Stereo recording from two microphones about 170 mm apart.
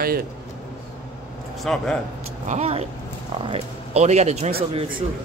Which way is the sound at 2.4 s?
40° right (ahead or behind).